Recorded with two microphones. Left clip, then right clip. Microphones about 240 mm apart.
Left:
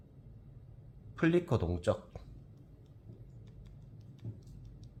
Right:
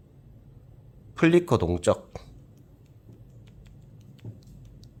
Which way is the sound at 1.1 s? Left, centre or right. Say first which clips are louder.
Right 10 dB; right.